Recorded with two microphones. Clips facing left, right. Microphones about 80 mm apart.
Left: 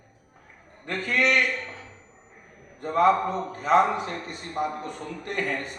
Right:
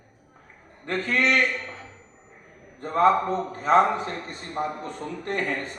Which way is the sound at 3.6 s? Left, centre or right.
Right.